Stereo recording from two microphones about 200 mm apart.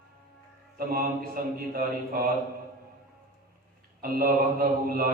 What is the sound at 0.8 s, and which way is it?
Mantra, 45° right (ahead or behind).